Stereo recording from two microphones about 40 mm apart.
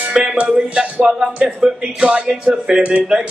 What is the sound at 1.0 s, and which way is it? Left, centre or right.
Music, centre.